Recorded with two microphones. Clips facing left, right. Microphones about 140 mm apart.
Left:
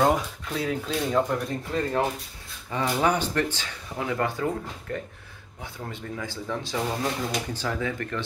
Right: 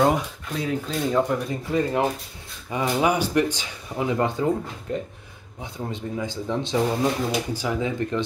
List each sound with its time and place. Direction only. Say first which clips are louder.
0.0 s speech: right 2 dB; centre (ahead or behind); by 8.2 s 20° right (ahead or behind)